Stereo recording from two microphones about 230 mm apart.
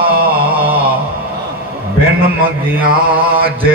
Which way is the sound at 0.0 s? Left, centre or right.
Right.